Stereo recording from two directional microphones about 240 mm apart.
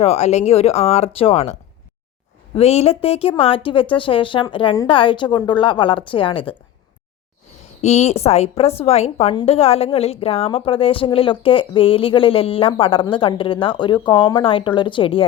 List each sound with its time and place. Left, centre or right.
0.0 s a woman's voice: left
2.6 s a woman's voice: left
7.8 s a woman's voice: left